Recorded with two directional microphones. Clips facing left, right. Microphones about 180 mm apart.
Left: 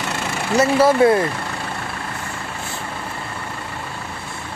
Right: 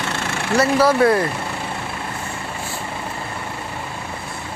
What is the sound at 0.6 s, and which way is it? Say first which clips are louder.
Speech: left 1 dB; 20° left (ahead or behind).